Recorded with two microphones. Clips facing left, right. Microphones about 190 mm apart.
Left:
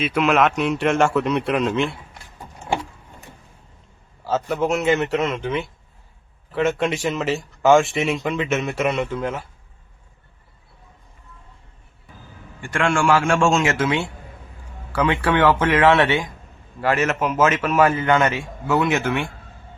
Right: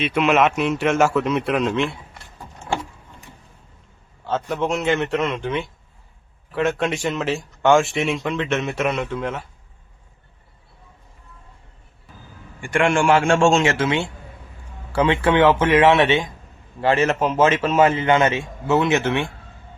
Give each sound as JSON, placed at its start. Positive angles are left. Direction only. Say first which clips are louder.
{"t": 0.0, "sound": "speech", "louder": "right 1 dB", "side_deg": 0}
{"t": 4.2, "sound": "speech", "louder": "left 1 dB", "side_deg": 5}
{"t": 12.5, "sound": "a man's voice", "louder": "right 2 dB", "side_deg": -15}